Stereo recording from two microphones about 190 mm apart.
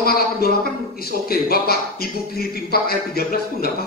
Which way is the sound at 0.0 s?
55° left (ahead or behind).